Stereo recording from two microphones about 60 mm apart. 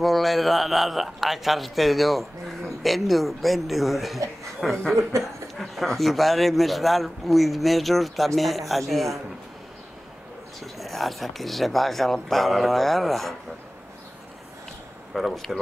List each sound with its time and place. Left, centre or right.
0.0 s a man's voice: centre
5.1 s speech: right
5.6 s a man's voice: centre
10.6 s a man's voice: centre
15.1 s a man's voice: centre